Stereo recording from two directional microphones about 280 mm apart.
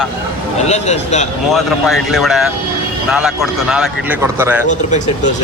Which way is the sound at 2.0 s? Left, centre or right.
Centre.